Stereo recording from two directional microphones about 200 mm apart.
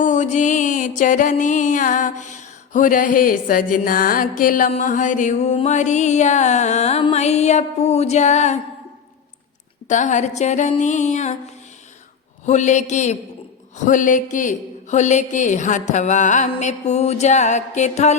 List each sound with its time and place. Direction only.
0.0 s music: 35° left (ahead or behind)
9.9 s music: 40° left (ahead or behind)
12.5 s music: 35° left (ahead or behind)